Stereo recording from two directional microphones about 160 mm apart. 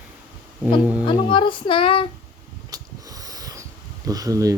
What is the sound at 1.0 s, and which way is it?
A woman's voice, 30° left (ahead or behind).